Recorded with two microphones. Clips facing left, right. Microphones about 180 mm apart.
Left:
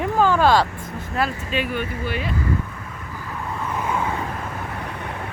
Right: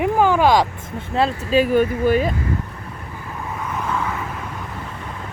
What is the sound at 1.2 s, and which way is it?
Speech, 35° right (ahead or behind).